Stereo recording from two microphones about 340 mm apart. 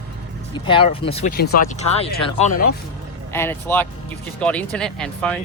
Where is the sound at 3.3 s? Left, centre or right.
Centre.